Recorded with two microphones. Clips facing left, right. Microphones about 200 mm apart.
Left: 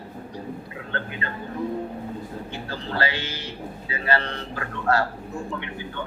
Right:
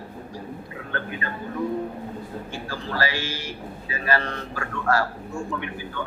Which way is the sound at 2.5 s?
25° left (ahead or behind).